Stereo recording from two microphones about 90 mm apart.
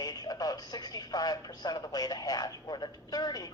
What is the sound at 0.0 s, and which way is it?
Speech, 50° left (ahead or behind).